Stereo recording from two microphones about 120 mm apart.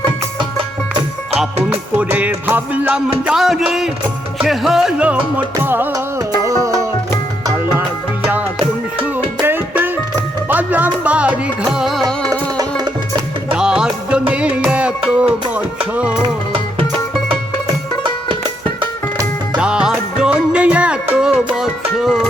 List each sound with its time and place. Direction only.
1.7 s music: 10° right (ahead or behind)
3.2 s music: 5° right (ahead or behind)
5.9 s music: 30° right (ahead or behind)
9.4 s music: 15° right (ahead or behind)
12.3 s music: 35° right (ahead or behind)
13.5 s music: 10° right (ahead or behind)
16.2 s music: 45° right (ahead or behind)
19.5 s music: 5° right (ahead or behind)